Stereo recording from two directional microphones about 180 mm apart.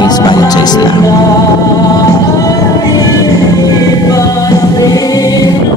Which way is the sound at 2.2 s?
20° left (ahead or behind).